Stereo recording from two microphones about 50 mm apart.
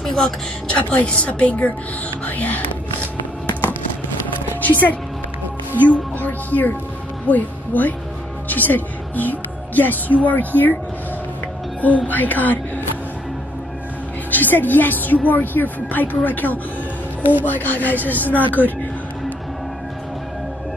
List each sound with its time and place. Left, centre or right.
0.0 s a sound: centre
0.7 s a woman's voice: left
4.6 s a woman's voice: left
12.1 s speech: left
14.3 s a woman's voice: left